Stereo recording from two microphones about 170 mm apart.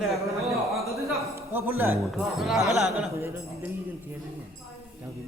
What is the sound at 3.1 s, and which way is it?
Speech, 15° right (ahead or behind).